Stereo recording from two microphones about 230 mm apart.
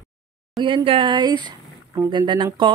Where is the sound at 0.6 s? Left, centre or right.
Right.